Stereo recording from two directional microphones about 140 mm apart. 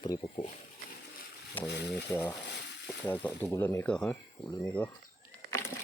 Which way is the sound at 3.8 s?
5° left (ahead or behind).